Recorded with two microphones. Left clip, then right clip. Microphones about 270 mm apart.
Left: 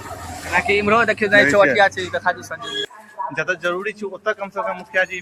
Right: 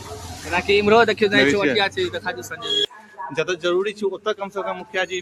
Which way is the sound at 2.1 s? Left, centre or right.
Centre.